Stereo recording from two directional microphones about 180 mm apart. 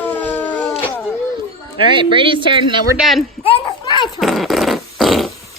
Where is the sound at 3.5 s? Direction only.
25° left (ahead or behind).